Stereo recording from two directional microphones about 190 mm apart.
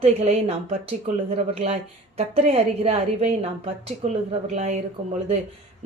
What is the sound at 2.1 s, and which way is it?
A woman's voice, 35° right (ahead or behind).